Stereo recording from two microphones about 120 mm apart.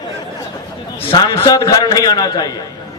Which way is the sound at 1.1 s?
35° left (ahead or behind).